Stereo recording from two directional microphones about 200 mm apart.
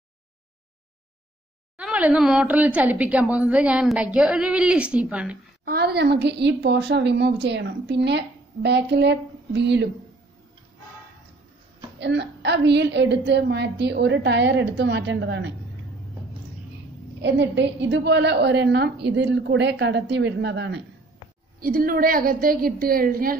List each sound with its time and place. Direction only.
1.8 s a woman's voice: 5° right (ahead or behind)
5.7 s a woman's voice: 50° right (ahead or behind)
12.0 s a woman's voice: 60° right (ahead or behind)
17.2 s a woman's voice: 60° right (ahead or behind)
21.5 s a woman's voice: 45° right (ahead or behind)